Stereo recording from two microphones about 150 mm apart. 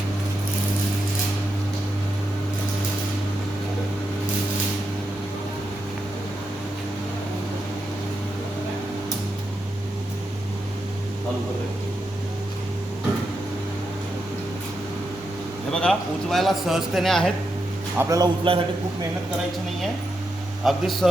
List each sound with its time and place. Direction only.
15.7 s a man's voice: 5° left (ahead or behind)
17.9 s a man's voice: 20° right (ahead or behind)
18.5 s a man's voice: 35° right (ahead or behind)
20.7 s a man's voice: centre (ahead or behind)